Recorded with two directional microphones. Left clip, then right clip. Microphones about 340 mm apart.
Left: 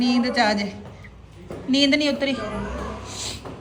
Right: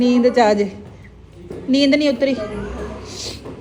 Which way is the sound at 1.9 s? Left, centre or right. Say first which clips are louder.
Right 5 dB; centre.